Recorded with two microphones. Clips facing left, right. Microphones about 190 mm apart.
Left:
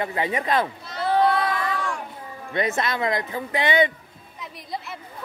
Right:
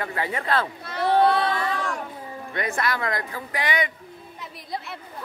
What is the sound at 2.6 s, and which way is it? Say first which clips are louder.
Speech: left 3 dB; 20° left (ahead or behind).